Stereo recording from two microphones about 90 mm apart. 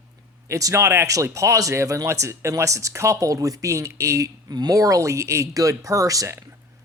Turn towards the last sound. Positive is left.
turn(degrees=-35)  # may be behind; listen again after turning